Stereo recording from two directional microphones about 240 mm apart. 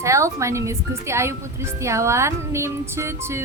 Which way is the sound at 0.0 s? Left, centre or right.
Centre.